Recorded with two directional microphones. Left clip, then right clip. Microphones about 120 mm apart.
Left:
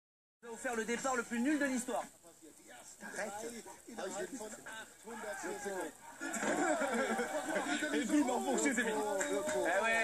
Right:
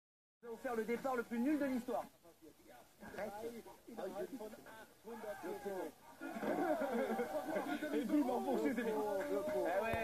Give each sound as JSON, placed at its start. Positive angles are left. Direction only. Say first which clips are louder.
{"t": 0.5, "sound": "speech", "louder": "left 2 dB", "side_deg": 25}